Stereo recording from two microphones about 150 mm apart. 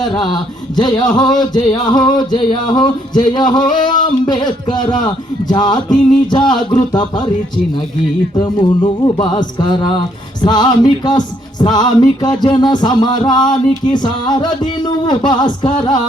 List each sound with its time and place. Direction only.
0.0 s a man's voice: 30° left (ahead or behind)
0.8 s music: 30° left (ahead or behind)
3.8 s a man's voice: 30° left (ahead or behind)
8.8 s music: 30° left (ahead or behind)